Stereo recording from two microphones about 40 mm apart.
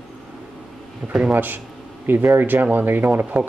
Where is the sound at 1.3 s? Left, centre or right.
Right.